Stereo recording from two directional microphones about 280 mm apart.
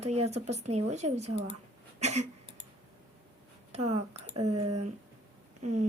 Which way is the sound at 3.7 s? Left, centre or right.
Right.